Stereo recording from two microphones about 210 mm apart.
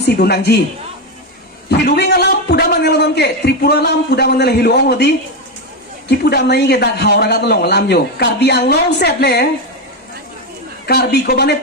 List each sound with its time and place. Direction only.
0.0 s a woman's voice: 50° left (ahead or behind)
1.7 s a man's voice: 50° left (ahead or behind)
10.8 s a man's voice: 50° left (ahead or behind)